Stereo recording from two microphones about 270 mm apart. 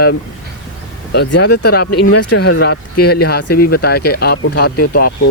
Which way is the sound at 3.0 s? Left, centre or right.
Left.